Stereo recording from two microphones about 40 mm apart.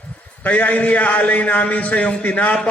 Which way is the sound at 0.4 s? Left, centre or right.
Left.